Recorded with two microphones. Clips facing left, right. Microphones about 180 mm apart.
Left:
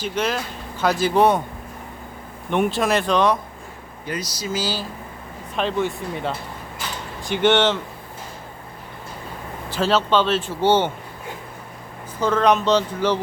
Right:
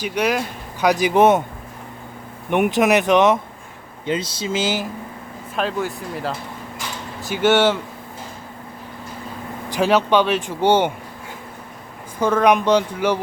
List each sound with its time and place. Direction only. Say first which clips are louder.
0.0 s speech: right 3 dB; 10° right (ahead or behind)
2.5 s speech: right 3 dB; 15° right (ahead or behind)
5.5 s speech: left 1 dB; 5° right (ahead or behind)
9.6 s speech: right 3 dB; 15° right (ahead or behind)
12.2 s speech: right 2 dB; 10° right (ahead or behind)